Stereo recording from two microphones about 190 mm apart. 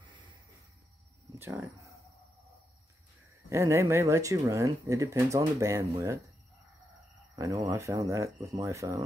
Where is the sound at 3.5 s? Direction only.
15° right (ahead or behind).